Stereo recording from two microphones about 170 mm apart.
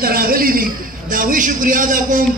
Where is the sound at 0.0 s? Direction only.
60° right (ahead or behind).